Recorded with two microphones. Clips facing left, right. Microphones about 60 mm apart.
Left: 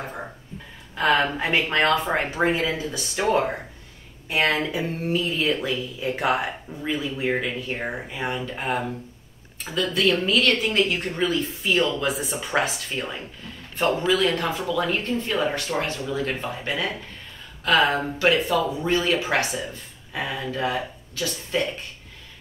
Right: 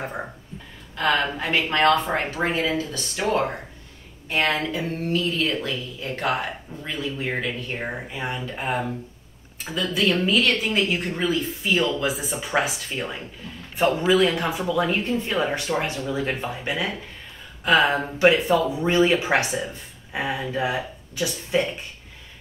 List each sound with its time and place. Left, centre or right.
0.9 s speech: centre
4.3 s a woman's voice: centre